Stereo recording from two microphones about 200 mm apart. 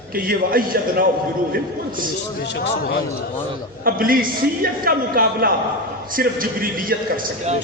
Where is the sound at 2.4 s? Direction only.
60° left (ahead or behind).